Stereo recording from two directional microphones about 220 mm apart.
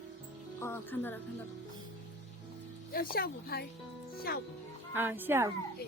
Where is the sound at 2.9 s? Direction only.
45° left (ahead or behind).